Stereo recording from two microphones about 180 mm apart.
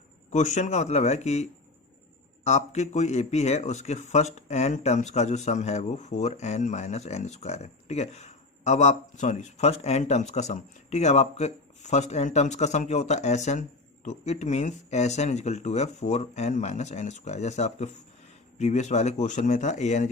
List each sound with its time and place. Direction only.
0.3 s speech: 40° left (ahead or behind)